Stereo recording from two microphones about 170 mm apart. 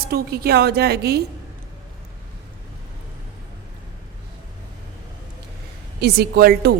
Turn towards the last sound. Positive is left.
turn(degrees=-65)  # may be behind; listen again after turning